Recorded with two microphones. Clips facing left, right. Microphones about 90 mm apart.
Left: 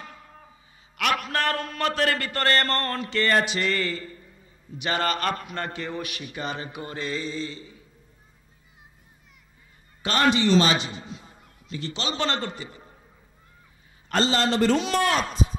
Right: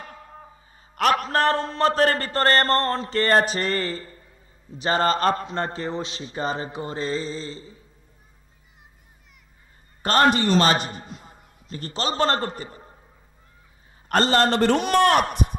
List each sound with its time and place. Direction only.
0.9 s a man's voice: 35° right (ahead or behind)
10.0 s a man's voice: 45° right (ahead or behind)
14.0 s a man's voice: 50° right (ahead or behind)